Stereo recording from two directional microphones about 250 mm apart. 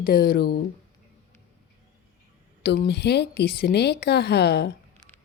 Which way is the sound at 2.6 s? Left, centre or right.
Left.